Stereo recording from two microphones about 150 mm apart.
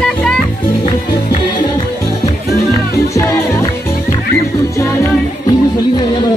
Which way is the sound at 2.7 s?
20° left (ahead or behind).